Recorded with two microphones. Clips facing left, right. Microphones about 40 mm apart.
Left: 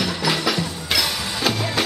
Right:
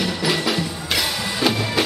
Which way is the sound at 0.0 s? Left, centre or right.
Centre.